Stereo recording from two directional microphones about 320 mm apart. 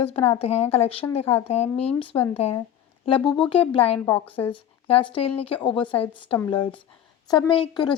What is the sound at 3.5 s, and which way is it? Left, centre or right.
A woman's voice, centre.